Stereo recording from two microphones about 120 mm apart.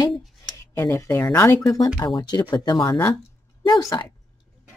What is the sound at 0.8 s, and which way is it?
Speech, 25° left (ahead or behind).